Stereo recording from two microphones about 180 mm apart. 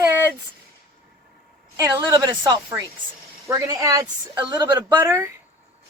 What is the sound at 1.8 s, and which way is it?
Speech, 20° right (ahead or behind).